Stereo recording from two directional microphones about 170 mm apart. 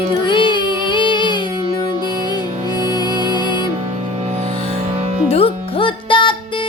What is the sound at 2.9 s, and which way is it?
Music, 25° left (ahead or behind).